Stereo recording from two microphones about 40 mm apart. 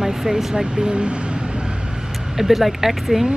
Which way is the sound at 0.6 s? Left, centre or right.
Right.